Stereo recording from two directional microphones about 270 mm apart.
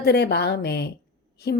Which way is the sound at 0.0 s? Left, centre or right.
Left.